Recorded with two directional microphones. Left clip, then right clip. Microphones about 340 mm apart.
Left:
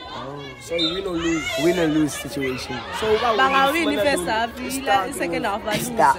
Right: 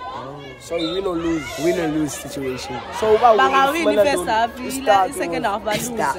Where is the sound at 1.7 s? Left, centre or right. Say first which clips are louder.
Left 1 dB; centre.